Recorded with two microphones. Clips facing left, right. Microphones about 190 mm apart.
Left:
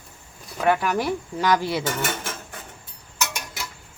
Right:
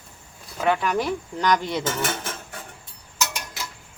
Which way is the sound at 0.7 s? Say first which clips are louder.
Left 1 dB; 5° left (ahead or behind).